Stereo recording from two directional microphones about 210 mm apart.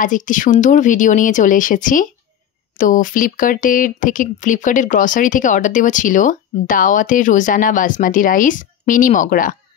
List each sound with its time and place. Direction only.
0.0 s speech: 40° left (ahead or behind)